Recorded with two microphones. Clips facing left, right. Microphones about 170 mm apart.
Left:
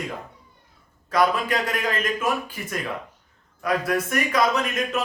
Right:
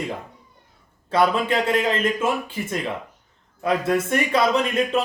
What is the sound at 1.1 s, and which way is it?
A man's voice, 25° right (ahead or behind).